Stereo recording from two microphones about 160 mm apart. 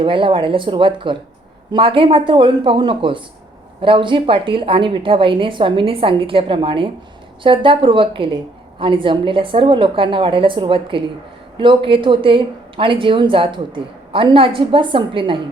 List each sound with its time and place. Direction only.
0.0 s speech: 30° right (ahead or behind)